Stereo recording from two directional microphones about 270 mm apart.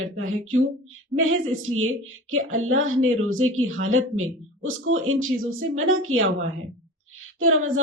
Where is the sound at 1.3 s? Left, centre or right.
Right.